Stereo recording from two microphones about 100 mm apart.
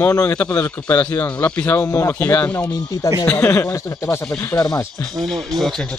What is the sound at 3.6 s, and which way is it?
Speech, 30° left (ahead or behind).